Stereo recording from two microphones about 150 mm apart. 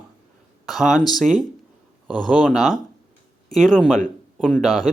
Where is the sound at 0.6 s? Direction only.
Centre (ahead or behind).